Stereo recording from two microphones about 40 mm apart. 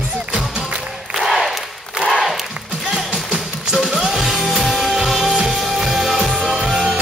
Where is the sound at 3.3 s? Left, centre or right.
Centre.